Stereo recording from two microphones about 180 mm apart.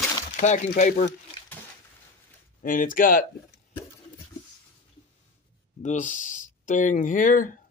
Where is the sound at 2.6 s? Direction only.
50° left (ahead or behind).